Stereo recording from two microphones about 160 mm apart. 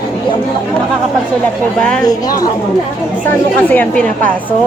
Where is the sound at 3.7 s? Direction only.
10° left (ahead or behind).